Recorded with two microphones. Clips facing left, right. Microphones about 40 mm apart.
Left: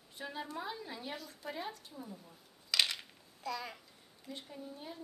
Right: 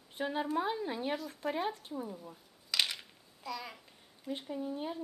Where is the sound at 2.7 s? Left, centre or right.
Centre.